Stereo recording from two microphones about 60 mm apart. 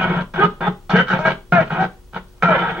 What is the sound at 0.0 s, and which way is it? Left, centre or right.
Music, centre.